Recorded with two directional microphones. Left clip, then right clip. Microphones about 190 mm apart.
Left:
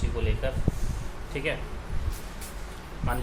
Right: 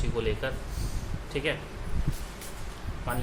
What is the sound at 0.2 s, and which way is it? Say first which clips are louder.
Speech: right 4 dB; 35° right (ahead or behind).